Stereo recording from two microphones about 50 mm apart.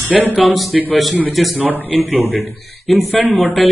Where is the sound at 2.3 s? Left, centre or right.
Centre.